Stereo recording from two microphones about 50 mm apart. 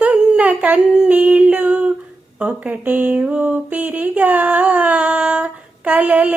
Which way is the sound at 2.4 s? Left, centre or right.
Right.